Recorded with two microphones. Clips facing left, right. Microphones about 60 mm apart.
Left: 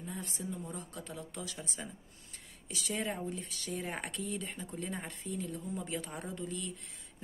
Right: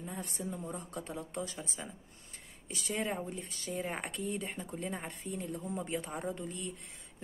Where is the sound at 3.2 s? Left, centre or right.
Right.